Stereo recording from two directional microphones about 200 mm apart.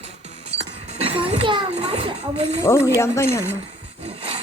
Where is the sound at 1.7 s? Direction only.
35° right (ahead or behind).